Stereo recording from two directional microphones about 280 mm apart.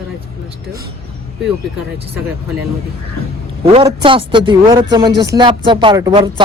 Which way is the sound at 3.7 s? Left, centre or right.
Centre.